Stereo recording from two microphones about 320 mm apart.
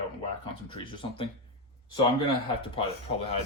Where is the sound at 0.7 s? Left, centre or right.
Centre.